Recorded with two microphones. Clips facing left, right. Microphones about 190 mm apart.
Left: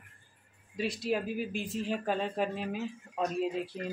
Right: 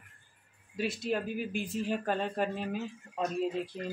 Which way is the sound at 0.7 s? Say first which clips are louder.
Left 1 dB; centre (ahead or behind).